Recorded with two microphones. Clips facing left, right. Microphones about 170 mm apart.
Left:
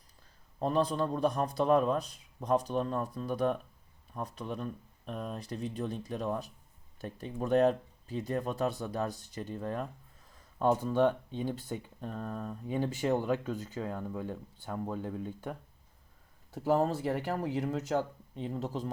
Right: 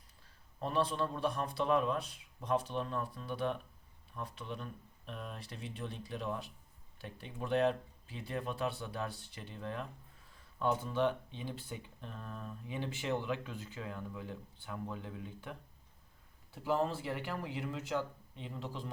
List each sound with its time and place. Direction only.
0.6 s a man's voice: 40° left (ahead or behind)